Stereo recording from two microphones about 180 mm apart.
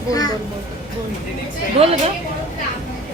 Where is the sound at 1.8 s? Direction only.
35° right (ahead or behind).